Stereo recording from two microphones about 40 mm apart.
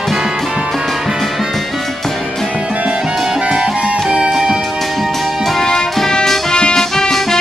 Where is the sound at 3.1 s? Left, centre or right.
Centre.